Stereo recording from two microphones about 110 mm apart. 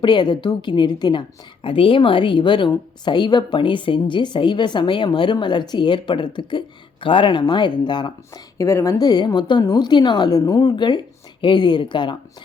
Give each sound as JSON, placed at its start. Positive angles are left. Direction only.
{"t": 0.0, "sound": "a woman's voice", "side_deg": 45}
{"t": 1.6, "sound": "a woman's voice", "side_deg": 55}
{"t": 8.5, "sound": "a woman's voice", "side_deg": 25}